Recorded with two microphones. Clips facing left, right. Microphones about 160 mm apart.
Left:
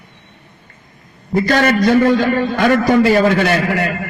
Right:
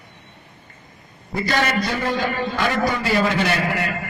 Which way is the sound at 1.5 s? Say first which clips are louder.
Left 8 dB; 55° left (ahead or behind).